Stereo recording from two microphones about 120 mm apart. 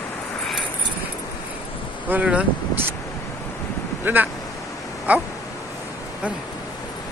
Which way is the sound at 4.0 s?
15° right (ahead or behind).